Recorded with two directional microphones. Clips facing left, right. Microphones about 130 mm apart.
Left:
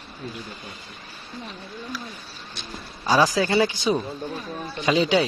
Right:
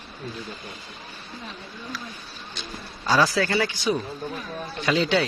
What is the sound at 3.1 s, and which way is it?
Speech, 15° left (ahead or behind).